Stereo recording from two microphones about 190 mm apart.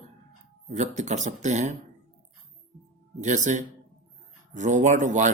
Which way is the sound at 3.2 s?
40° right (ahead or behind).